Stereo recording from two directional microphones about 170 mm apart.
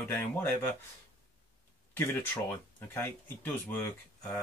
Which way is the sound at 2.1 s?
15° left (ahead or behind).